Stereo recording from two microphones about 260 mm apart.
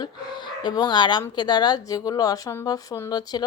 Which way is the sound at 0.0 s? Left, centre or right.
Centre.